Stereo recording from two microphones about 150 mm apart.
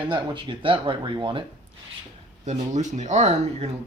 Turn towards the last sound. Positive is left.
turn(degrees=-45)  # may be behind; listen again after turning